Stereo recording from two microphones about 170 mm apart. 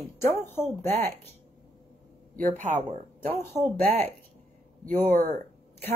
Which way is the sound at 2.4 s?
45° right (ahead or behind).